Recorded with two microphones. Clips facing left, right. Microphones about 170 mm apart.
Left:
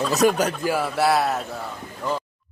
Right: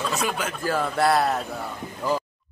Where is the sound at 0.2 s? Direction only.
40° left (ahead or behind).